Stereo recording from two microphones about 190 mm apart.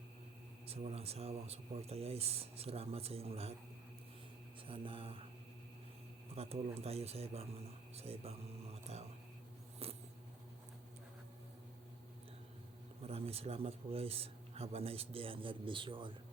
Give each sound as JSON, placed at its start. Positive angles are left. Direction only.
{"t": 0.7, "sound": "a man's voice", "side_deg": -30}
{"t": 4.6, "sound": "mantra", "side_deg": -25}
{"t": 6.3, "sound": "a man's voice", "side_deg": -30}
{"t": 8.9, "sound": "whispering", "side_deg": -35}
{"t": 9.8, "sound": "vehicle", "side_deg": -30}
{"t": 13.0, "sound": "a man's voice", "side_deg": -30}